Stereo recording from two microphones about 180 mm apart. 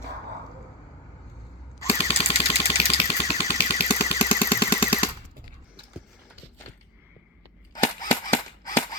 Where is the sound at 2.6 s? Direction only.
35° left (ahead or behind).